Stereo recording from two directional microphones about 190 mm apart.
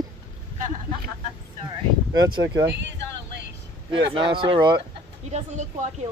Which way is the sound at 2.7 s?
65° right (ahead or behind).